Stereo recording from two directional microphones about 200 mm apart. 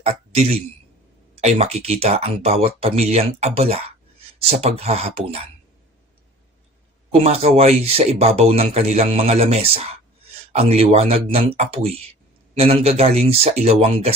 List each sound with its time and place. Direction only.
0.0 s a man's voice: 30° right (ahead or behind)
7.1 s a man's voice: 30° right (ahead or behind)